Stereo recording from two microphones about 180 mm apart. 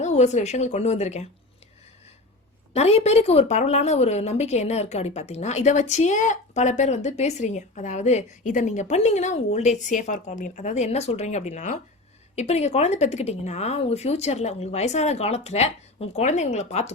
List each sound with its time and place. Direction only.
0.0 s a woman's voice: 40° left (ahead or behind)
2.7 s a woman's voice: 35° left (ahead or behind)